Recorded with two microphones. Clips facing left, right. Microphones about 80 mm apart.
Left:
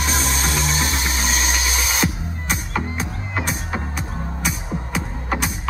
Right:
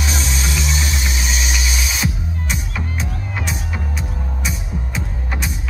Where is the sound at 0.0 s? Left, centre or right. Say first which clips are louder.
Left 1 dB; left.